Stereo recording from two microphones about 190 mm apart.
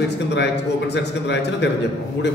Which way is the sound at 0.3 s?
65° left (ahead or behind).